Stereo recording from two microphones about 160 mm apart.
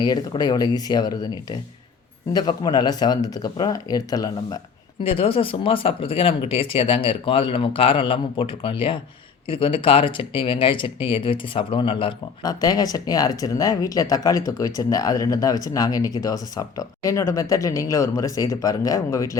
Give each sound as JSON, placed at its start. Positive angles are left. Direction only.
{"t": 0.0, "sound": "speech", "side_deg": 25}
{"t": 5.0, "sound": "speech", "side_deg": 35}